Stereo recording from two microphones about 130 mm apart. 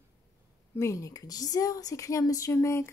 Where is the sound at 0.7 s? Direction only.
20° left (ahead or behind).